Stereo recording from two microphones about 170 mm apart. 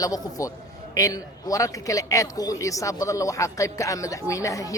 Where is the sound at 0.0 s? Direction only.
20° left (ahead or behind).